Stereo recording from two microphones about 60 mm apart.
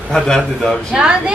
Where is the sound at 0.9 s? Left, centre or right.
Centre.